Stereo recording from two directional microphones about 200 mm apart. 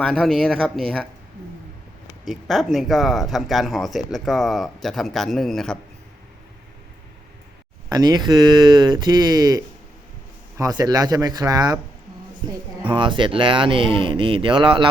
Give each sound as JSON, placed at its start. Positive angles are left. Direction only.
{"t": 0.0, "sound": "speech", "side_deg": 5}
{"t": 2.2, "sound": "speech", "side_deg": 0}
{"t": 7.9, "sound": "speech", "side_deg": -20}
{"t": 12.9, "sound": "speech", "side_deg": -25}